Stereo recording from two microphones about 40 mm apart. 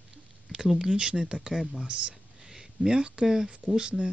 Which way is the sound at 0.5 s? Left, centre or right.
Centre.